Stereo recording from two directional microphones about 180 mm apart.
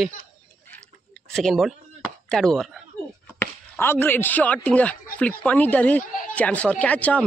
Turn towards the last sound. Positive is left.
turn(degrees=10)  # may be behind; listen again after turning